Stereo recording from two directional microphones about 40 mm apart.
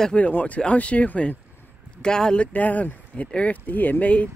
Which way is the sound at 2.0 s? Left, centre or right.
Centre.